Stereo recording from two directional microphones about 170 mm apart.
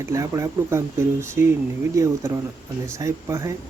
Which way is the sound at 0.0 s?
15° right (ahead or behind).